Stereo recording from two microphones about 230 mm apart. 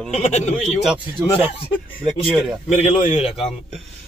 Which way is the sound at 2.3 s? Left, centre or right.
Centre.